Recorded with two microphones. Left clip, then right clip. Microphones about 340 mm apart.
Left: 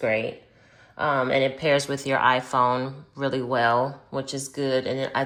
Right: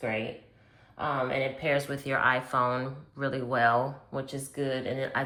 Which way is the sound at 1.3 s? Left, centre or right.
Centre.